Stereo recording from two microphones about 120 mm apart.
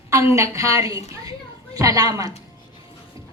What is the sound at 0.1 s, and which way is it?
A woman's voice, 25° right (ahead or behind).